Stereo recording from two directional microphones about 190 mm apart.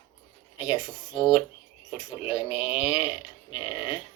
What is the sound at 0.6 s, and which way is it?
Speech, 25° left (ahead or behind).